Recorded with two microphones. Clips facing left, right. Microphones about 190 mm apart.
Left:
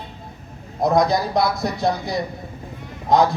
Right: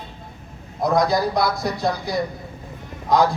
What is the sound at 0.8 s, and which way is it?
Speech, 20° left (ahead or behind).